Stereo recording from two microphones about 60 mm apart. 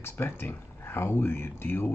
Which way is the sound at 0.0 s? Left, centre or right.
Left.